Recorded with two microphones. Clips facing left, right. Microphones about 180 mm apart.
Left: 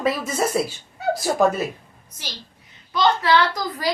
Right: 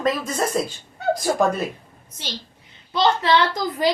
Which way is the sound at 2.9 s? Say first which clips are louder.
Even; 25° right (ahead or behind).